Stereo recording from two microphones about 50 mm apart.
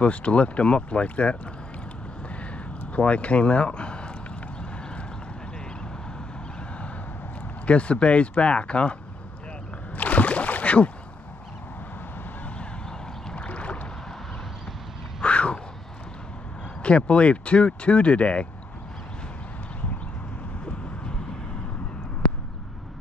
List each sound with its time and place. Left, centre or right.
0.0 s speech: left
2.9 s speech: left
7.6 s speech: left
9.9 s rowboat: left
13.3 s boat: left
15.2 s a sound: left
16.8 s speech: left